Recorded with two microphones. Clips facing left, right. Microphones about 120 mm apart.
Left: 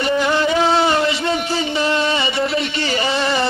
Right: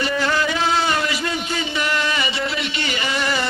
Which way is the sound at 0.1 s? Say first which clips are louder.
Left 4 dB; 25° left (ahead or behind).